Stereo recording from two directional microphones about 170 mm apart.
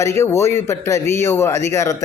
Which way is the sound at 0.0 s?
15° left (ahead or behind).